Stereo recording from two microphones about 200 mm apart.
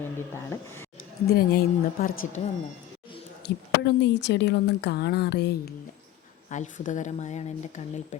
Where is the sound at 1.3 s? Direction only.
50° left (ahead or behind).